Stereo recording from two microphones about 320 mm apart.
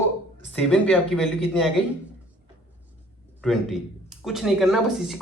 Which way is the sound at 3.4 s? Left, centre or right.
Centre.